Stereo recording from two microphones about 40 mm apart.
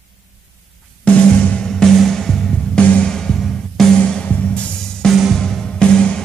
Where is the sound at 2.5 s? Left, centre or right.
Left.